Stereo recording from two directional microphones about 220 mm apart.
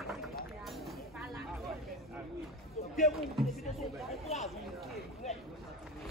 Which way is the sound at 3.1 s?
Centre (ahead or behind).